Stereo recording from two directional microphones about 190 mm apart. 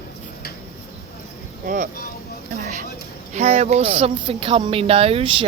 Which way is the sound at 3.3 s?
35° right (ahead or behind).